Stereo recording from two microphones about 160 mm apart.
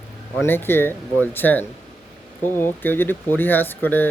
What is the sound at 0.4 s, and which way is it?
Speech, 15° left (ahead or behind).